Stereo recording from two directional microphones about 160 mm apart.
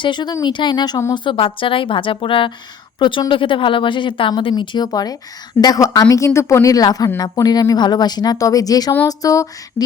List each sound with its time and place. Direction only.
0.0 s speech: 30° left (ahead or behind)